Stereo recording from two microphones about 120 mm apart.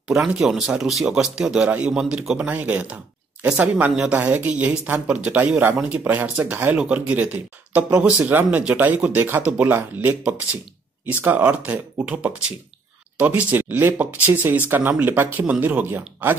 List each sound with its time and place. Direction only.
0.1 s speech: centre (ahead or behind); by 16.3 s 15° right (ahead or behind)